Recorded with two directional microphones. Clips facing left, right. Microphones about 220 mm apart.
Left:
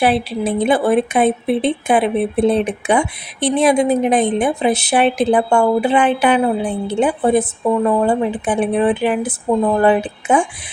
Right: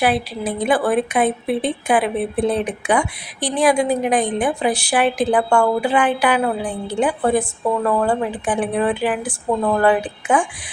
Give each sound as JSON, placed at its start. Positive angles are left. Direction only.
{"t": 0.0, "sound": "speech", "side_deg": 25}